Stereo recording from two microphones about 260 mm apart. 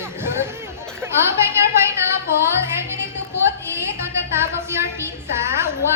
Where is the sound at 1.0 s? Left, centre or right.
Centre.